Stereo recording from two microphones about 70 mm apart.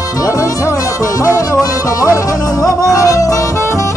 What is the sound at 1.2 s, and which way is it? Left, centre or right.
Music, left.